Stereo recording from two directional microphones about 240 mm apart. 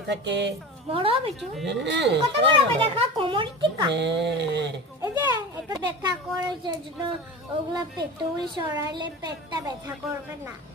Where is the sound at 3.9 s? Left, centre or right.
Right.